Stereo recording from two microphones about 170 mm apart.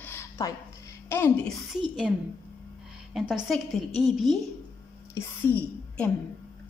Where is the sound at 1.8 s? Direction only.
5° right (ahead or behind).